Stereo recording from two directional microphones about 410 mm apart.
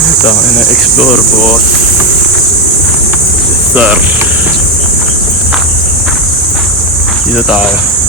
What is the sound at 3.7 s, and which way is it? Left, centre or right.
Speech, centre.